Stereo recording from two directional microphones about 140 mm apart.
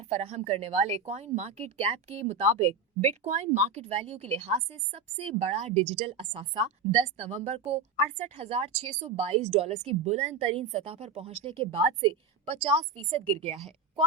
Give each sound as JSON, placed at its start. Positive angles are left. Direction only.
{"t": 0.1, "sound": "a woman's voice", "side_deg": -50}